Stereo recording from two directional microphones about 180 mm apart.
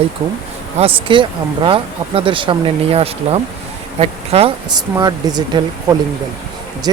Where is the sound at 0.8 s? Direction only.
30° right (ahead or behind).